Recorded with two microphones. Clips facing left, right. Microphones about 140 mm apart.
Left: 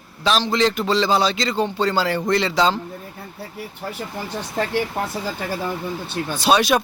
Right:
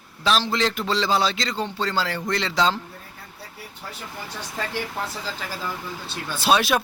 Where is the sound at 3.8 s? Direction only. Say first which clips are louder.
Left 8 dB; 55° left (ahead or behind).